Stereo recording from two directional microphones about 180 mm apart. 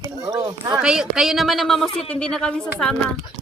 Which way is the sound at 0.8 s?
5° right (ahead or behind).